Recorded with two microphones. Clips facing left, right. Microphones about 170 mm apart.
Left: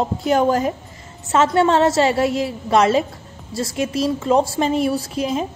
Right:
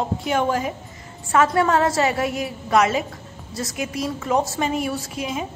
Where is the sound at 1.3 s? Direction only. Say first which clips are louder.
Left 3 dB; 25° left (ahead or behind).